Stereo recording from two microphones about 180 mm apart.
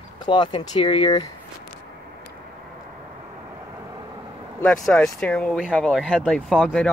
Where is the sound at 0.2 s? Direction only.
25° left (ahead or behind).